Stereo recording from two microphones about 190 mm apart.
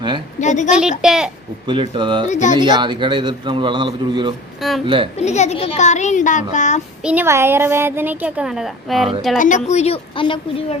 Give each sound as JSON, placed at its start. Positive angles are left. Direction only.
{"t": 0.3, "sound": "a woman's voice", "side_deg": 40}
{"t": 0.8, "sound": "a child's voice", "side_deg": -5}
{"t": 1.6, "sound": "a man's voice", "side_deg": -25}
{"t": 2.2, "sound": "speech", "side_deg": 40}
{"t": 2.6, "sound": "a man's voice", "side_deg": -20}
{"t": 4.6, "sound": "a child's voice", "side_deg": 0}
{"t": 5.1, "sound": "speech", "side_deg": 35}
{"t": 7.0, "sound": "a child's voice", "side_deg": -10}
{"t": 9.6, "sound": "speech", "side_deg": 35}